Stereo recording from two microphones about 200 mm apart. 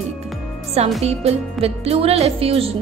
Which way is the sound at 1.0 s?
30° right (ahead or behind).